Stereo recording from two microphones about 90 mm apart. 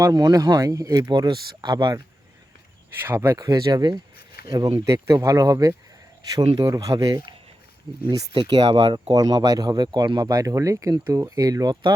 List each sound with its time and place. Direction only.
0.0 s speech: 45° right (ahead or behind)
1.1 s speech: 55° right (ahead or behind)
3.0 s speech: 25° right (ahead or behind)
3.3 s speech: 45° right (ahead or behind)
8.3 s speech: 70° right (ahead or behind)
9.1 s speech: 50° right (ahead or behind)